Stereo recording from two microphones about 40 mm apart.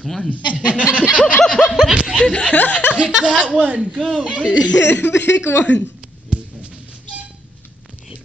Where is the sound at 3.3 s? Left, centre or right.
Right.